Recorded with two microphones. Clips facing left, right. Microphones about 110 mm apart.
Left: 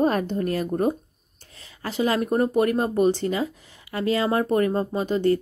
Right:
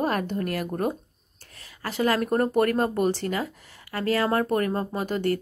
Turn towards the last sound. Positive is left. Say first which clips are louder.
# left 4 dB
turn(degrees=20)  # may be behind; listen again after turning